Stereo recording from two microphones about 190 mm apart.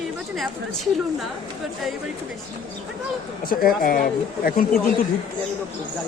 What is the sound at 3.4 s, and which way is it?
Speech, 50° left (ahead or behind).